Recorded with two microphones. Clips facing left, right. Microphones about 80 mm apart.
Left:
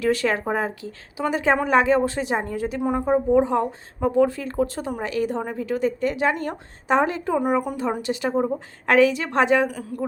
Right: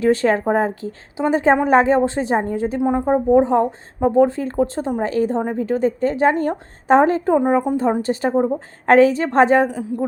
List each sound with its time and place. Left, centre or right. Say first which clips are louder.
0.0 s a woman's voice: right 5 dB; right
7.3 s a woman's voice: right 5 dB; right
9.7 s a woman's voice: right 6 dB; right